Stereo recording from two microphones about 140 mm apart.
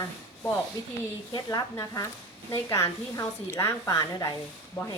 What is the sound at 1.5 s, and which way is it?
A woman's voice, 25° left (ahead or behind).